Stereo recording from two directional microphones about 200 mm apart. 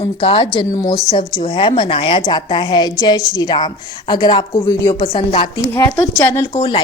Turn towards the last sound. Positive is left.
turn(degrees=25)  # may be behind; listen again after turning